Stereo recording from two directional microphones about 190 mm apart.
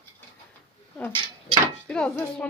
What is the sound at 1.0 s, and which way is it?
A woman's voice, 5° left (ahead or behind).